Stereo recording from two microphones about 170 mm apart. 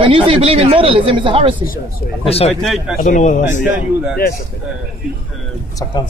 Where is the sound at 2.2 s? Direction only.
35° left (ahead or behind).